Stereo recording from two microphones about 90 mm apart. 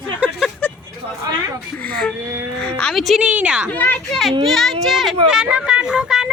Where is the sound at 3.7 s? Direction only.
20° left (ahead or behind).